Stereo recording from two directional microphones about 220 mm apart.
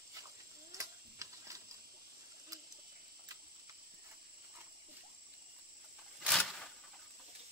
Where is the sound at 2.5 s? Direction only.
15° right (ahead or behind).